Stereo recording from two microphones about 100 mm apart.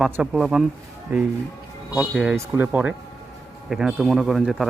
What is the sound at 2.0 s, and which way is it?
Speech, 5° right (ahead or behind).